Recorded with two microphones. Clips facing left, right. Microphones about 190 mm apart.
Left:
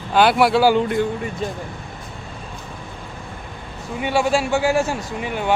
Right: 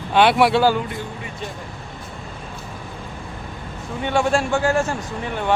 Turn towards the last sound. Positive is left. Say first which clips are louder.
# left 1 dB
turn(degrees=5)  # may be behind; listen again after turning